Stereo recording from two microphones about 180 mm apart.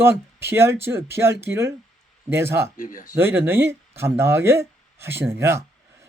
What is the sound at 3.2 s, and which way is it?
Speech, 10° right (ahead or behind).